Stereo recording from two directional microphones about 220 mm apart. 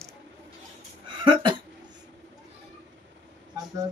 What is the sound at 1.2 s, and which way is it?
Speech, 20° right (ahead or behind).